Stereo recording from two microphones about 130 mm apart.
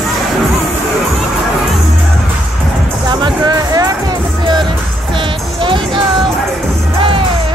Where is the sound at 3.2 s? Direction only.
35° right (ahead or behind).